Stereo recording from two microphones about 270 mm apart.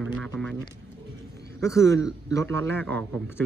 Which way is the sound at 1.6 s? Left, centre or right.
Centre.